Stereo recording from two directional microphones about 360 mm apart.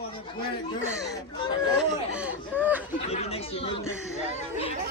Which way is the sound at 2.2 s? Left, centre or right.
Centre.